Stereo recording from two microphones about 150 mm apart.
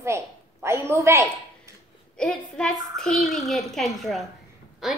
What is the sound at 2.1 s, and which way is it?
A woman's voice, 5° left (ahead or behind).